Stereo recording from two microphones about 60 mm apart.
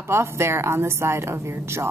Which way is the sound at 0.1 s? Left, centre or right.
Right.